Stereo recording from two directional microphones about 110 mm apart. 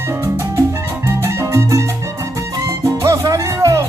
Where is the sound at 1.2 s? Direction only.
25° right (ahead or behind).